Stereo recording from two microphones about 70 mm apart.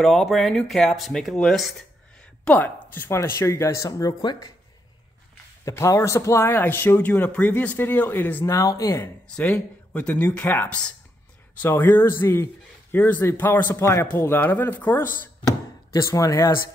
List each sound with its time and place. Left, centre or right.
0.0 s speech: centre
2.4 s a woman's voice: left
3.2 s speech: left
4.2 s speech: left
5.7 s speech: left
8.5 s speech: left
9.9 s speech: left
12.9 s speech: left
15.9 s speech: left